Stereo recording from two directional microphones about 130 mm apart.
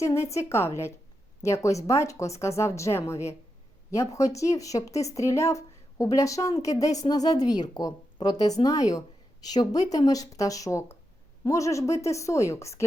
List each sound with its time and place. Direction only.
0.0 s speech: 20° left (ahead or behind)